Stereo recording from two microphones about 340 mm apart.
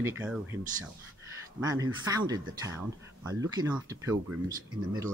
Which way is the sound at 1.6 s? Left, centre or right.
Centre.